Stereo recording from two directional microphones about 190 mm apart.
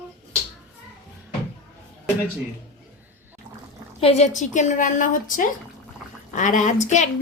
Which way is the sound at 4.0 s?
35° left (ahead or behind).